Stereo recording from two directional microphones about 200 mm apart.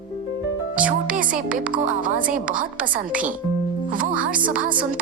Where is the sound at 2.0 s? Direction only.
45° right (ahead or behind).